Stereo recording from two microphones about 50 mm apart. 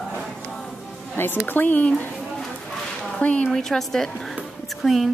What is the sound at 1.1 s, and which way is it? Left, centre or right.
Speech, left.